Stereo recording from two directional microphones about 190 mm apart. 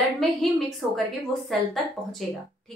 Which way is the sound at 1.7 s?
Centre (ahead or behind).